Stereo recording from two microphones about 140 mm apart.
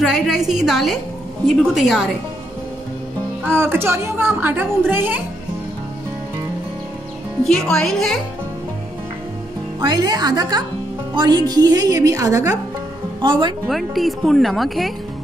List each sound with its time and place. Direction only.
0.0 s speech: centre (ahead or behind)
3.4 s a woman's voice: 15° right (ahead or behind)
7.4 s speech: 5° left (ahead or behind)
9.8 s a woman's voice: 30° right (ahead or behind)
13.2 s a woman's voice: 35° right (ahead or behind)
13.7 s speech: centre (ahead or behind)